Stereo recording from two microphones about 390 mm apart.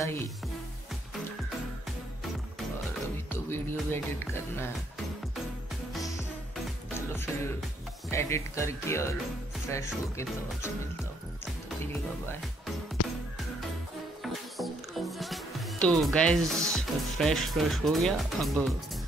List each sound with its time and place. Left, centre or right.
0.0 s speech: centre
3.3 s music: centre
8.1 s speech: centre
14.2 s music: centre